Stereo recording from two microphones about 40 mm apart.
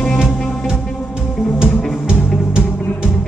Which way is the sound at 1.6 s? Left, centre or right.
Right.